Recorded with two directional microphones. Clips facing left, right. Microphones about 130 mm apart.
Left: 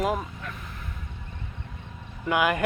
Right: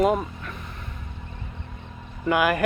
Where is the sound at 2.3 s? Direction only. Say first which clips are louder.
Right 2 dB; 20° left (ahead or behind).